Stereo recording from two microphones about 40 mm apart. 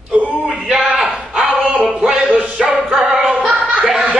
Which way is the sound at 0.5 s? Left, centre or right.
Centre.